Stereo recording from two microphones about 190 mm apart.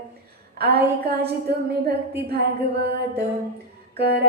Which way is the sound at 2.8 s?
60° right (ahead or behind).